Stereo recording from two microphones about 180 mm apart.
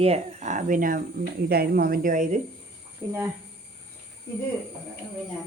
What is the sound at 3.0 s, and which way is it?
Speech, 15° right (ahead or behind).